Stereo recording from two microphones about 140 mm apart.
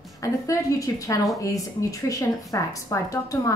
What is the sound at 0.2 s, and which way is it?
A woman's voice, 25° left (ahead or behind).